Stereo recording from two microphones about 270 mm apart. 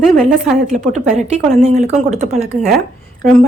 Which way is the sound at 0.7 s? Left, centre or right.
Right.